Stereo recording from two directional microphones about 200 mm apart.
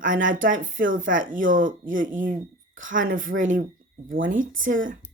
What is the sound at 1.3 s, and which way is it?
Speech, 40° right (ahead or behind).